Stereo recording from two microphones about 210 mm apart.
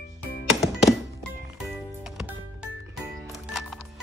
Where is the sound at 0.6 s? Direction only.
Centre (ahead or behind).